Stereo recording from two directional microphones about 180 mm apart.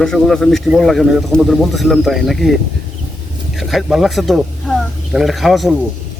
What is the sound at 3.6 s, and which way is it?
Speech, centre (ahead or behind).